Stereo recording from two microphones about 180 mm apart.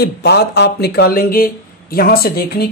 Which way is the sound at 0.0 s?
65° left (ahead or behind).